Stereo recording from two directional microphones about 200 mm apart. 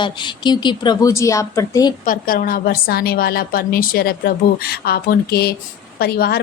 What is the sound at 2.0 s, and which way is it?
A woman's voice, 45° left (ahead or behind).